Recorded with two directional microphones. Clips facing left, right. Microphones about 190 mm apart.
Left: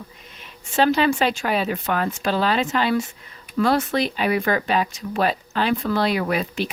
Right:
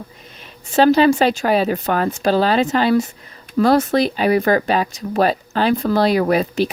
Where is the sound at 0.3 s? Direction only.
35° right (ahead or behind).